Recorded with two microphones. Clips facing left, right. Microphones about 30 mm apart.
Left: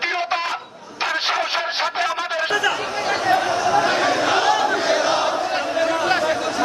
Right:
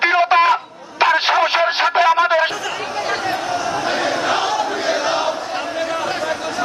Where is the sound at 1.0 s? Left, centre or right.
Right.